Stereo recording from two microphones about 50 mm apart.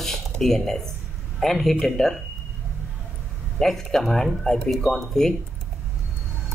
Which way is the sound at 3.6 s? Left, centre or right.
Centre.